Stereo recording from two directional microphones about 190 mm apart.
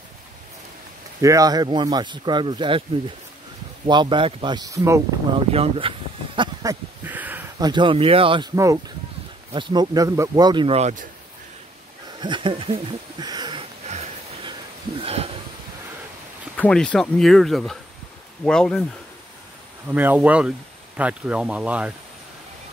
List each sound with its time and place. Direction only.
1.2 s speech: 20° right (ahead or behind)
3.8 s speech: 25° right (ahead or behind)
5.5 s a sound: 30° right (ahead or behind); by 7.4 s 10° right (ahead or behind)
7.5 s speech: 25° right (ahead or behind)
12.2 s speech: 25° right (ahead or behind)
13.8 s a sound: 35° right (ahead or behind)
16.5 s speech: 5° left (ahead or behind)
19.9 s speech: 10° right (ahead or behind)